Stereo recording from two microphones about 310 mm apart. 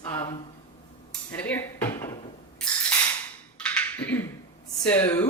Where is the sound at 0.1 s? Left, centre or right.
Centre.